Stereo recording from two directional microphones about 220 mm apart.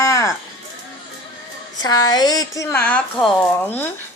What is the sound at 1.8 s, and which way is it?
Speech, 15° left (ahead or behind).